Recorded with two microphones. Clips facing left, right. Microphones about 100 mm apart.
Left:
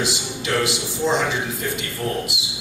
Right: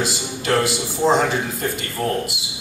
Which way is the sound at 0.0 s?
45° right (ahead or behind).